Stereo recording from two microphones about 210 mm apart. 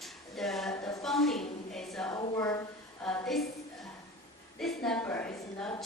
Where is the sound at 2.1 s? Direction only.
15° left (ahead or behind).